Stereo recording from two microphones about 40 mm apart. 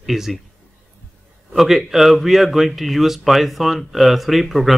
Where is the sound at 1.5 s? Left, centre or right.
Centre.